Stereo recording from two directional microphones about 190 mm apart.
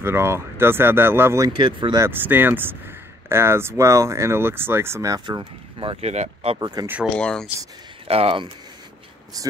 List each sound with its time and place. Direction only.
0.0 s speech: 10° right (ahead or behind)
1.5 s speech: 25° right (ahead or behind)
7.2 s speech: 5° left (ahead or behind)
8.1 s speech: 30° right (ahead or behind)
9.3 s speech: 20° right (ahead or behind)